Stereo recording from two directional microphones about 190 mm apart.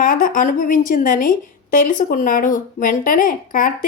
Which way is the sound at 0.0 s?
45° left (ahead or behind).